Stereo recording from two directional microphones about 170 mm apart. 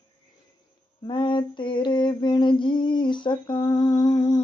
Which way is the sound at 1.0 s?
30° left (ahead or behind).